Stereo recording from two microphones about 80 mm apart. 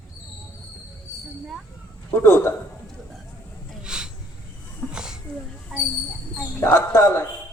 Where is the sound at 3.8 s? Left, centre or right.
Centre.